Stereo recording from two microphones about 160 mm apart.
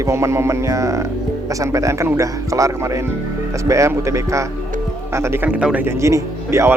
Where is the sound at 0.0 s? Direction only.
20° right (ahead or behind).